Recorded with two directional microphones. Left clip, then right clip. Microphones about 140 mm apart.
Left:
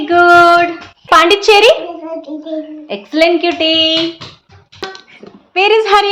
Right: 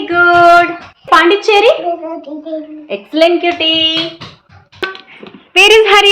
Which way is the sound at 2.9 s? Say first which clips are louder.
Right 1 dB; 20° left (ahead or behind).